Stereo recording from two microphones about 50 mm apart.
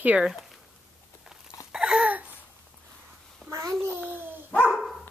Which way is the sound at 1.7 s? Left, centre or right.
Centre.